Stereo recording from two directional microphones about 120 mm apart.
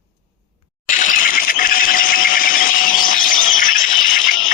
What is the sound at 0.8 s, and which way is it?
Mechanisms, 90° left.